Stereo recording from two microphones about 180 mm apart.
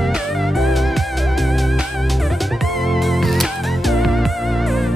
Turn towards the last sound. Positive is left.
turn(degrees=0)  # may be behind; listen again after turning